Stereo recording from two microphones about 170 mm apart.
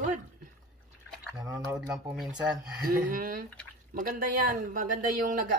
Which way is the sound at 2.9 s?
55° right (ahead or behind).